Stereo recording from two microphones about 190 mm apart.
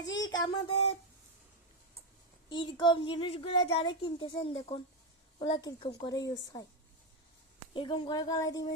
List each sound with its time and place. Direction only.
0.0 s a sound: 75° left (ahead or behind)
0.3 s speech: 25° left (ahead or behind)
2.5 s speech: 25° left (ahead or behind)
7.7 s speech: 25° left (ahead or behind)